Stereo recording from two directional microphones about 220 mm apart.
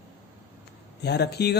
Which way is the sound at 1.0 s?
50° left (ahead or behind).